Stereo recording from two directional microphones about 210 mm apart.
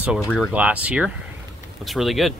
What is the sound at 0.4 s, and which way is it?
Speech, 5° right (ahead or behind).